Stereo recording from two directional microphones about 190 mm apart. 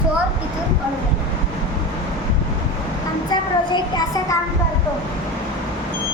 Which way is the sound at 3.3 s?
20° left (ahead or behind).